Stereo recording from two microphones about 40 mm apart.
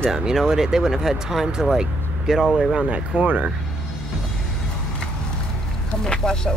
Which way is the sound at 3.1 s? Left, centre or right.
Right.